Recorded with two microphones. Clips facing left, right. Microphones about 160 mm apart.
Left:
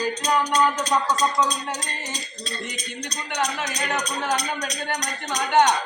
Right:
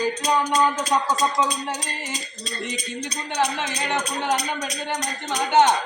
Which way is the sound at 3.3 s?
30° right (ahead or behind).